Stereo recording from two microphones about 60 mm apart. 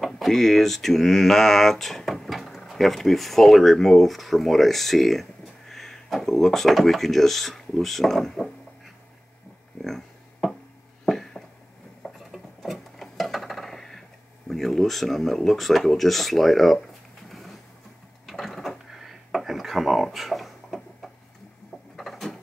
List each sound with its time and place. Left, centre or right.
0.0 s speech: centre
9.8 s a sound: centre
14.5 s speech: centre
17.3 s vehicle: centre
18.2 s drawer open or close: centre
21.9 s a sound: centre